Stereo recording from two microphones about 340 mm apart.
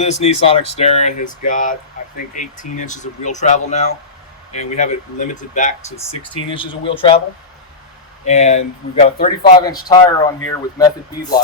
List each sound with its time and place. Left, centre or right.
0.0 s speech: centre
8.2 s speech: left
9.6 s speech: centre